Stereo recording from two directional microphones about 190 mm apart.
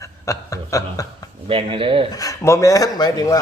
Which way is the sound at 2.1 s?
15° left (ahead or behind).